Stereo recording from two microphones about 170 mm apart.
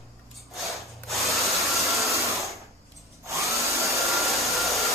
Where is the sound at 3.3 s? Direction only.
20° right (ahead or behind).